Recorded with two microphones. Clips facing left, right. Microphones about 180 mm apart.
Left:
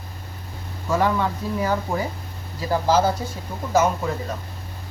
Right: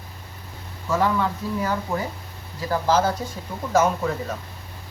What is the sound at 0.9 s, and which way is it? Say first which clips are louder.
Speech: left 1 dB; 15° left (ahead or behind).